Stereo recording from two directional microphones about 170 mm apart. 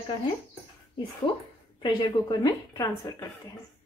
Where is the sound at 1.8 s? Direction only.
25° left (ahead or behind).